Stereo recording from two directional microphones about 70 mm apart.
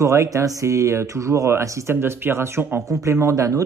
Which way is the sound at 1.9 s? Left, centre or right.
Right.